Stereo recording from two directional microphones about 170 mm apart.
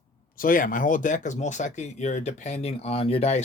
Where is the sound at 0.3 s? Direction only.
55° left (ahead or behind).